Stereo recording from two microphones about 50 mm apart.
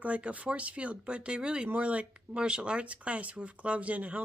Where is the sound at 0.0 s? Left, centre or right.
Right.